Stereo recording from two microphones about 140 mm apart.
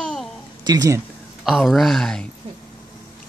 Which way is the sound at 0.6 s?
25° right (ahead or behind).